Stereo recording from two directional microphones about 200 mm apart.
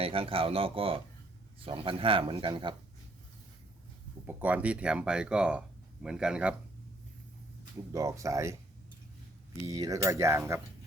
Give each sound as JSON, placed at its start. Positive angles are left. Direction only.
{"t": 0.0, "sound": "speech", "side_deg": -30}
{"t": 4.3, "sound": "speech", "side_deg": -10}
{"t": 7.9, "sound": "cutlery", "side_deg": -15}
{"t": 9.6, "sound": "cutlery", "side_deg": -15}